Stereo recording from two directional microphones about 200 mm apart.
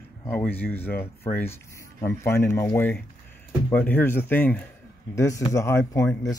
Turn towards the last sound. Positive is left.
turn(degrees=15)  # may be behind; listen again after turning